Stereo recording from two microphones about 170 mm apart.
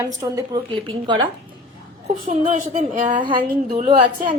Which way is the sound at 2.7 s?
50° right (ahead or behind).